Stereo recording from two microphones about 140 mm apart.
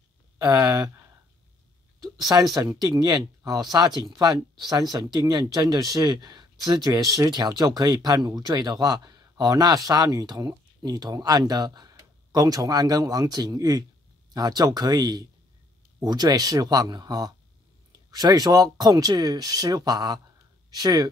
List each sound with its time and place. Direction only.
0.4 s speech: 25° right (ahead or behind)
2.3 s speech: 20° right (ahead or behind)